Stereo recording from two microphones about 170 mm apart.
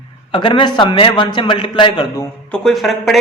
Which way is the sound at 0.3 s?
30° left (ahead or behind).